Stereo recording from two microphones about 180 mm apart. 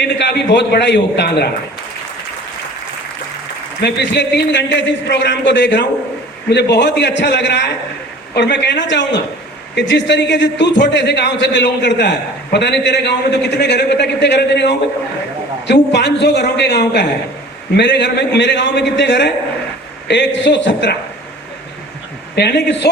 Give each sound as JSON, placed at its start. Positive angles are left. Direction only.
{"t": 0.0, "sound": "a man's voice", "side_deg": 70}
{"t": 3.8, "sound": "a man's voice", "side_deg": 70}
{"t": 22.4, "sound": "a man's voice", "side_deg": 70}